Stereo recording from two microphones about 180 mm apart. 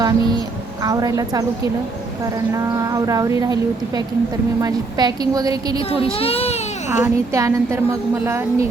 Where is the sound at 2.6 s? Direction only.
20° right (ahead or behind).